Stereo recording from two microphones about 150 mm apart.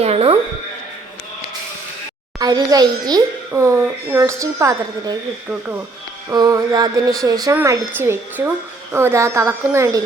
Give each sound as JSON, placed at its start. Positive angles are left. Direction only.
{"t": 0.0, "sound": "music", "side_deg": -40}
{"t": 2.4, "sound": "a woman's voice", "side_deg": -25}
{"t": 6.3, "sound": "a woman's voice", "side_deg": -25}